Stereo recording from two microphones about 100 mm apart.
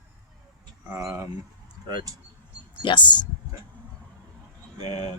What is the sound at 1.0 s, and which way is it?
Speech, 30° right (ahead or behind).